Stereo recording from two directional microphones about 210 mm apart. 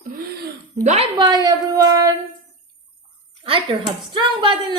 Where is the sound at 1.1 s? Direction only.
20° right (ahead or behind).